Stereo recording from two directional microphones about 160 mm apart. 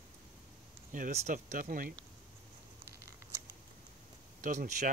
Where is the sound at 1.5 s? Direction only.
60° right (ahead or behind).